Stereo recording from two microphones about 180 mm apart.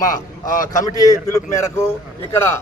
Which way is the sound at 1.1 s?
15° left (ahead or behind).